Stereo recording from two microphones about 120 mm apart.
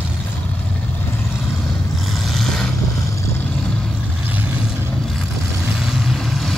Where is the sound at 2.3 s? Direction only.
5° left (ahead or behind).